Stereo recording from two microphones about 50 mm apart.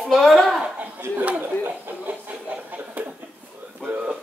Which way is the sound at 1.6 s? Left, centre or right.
Right.